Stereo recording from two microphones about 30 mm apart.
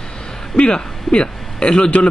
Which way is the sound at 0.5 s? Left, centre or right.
Left.